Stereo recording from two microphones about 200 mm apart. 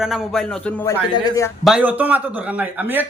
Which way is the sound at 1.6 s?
5° right (ahead or behind).